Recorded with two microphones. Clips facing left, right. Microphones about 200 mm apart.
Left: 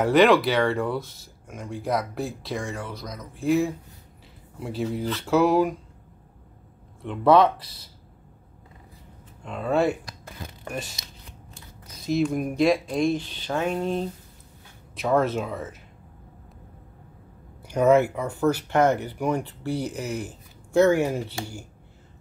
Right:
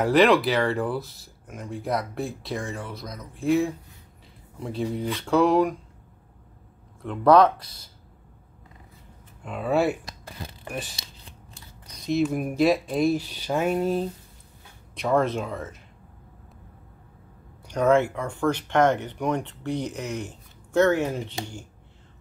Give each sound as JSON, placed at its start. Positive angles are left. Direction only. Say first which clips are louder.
{"t": 0.0, "sound": "speech", "louder": "left 1 dB", "side_deg": 0}
{"t": 7.0, "sound": "speech", "louder": "right 1 dB", "side_deg": 0}
{"t": 9.4, "sound": "speech", "louder": "even", "side_deg": -5}
{"t": 10.0, "sound": "crumpling", "louder": "right 1 dB", "side_deg": -30}
{"t": 10.7, "sound": "speech", "louder": "left 1 dB", "side_deg": 0}
{"t": 17.6, "sound": "speech", "louder": "left 2 dB", "side_deg": 5}